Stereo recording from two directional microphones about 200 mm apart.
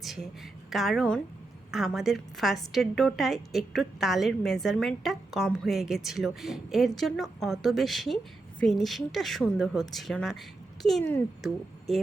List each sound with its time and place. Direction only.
0.0 s a woman's voice: centre (ahead or behind)